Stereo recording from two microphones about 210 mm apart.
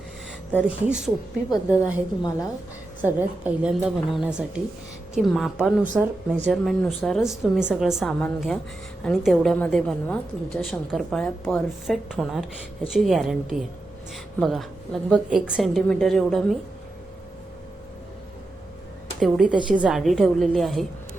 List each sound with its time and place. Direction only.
0.9 s a woman's voice: 5° right (ahead or behind)
1.8 s a woman's voice: 15° left (ahead or behind)
3.0 s a woman's voice: 5° right (ahead or behind)
19.2 s a woman's voice: centre (ahead or behind)